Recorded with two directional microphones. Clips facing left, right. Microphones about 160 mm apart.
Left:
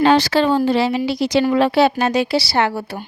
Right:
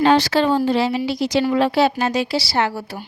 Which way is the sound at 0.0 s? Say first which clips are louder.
Left 1 dB; 85° left.